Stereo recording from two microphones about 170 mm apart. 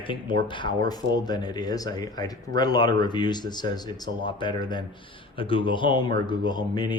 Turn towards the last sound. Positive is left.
turn(degrees=25)  # may be behind; listen again after turning